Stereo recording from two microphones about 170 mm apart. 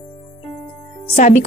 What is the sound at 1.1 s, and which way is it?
Speech, 45° left (ahead or behind).